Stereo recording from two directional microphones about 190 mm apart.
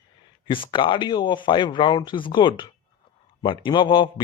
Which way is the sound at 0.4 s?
25° left (ahead or behind).